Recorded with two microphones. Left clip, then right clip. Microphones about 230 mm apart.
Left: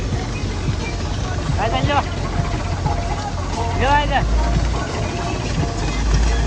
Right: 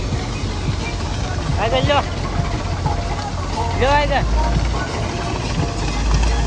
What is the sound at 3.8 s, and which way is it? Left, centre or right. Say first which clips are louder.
Vehicle: right 1 dB; right.